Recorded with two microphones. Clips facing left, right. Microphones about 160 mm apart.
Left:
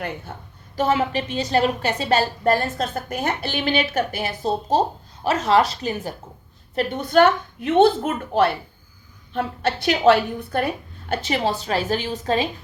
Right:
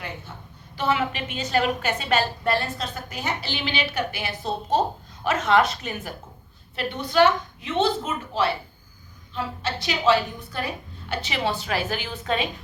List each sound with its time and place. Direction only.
0.3 s a woman's voice: 55° left (ahead or behind)
0.8 s a woman's voice: 40° left (ahead or behind)
6.7 s a woman's voice: 50° left (ahead or behind)
11.1 s a woman's voice: 45° left (ahead or behind)